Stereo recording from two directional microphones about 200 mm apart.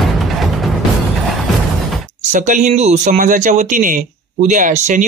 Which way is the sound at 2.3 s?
40° right (ahead or behind).